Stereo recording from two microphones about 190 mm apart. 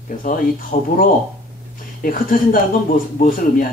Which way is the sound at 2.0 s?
45° left (ahead or behind).